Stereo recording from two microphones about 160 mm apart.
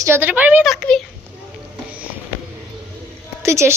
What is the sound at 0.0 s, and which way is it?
Speech, 15° right (ahead or behind).